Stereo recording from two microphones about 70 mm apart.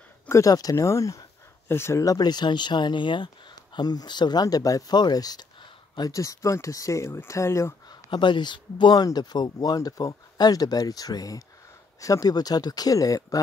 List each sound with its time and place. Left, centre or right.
0.3 s speech: left
1.7 s speech: left
2.0 s speech: left
5.9 s speech: left
8.1 s speech: left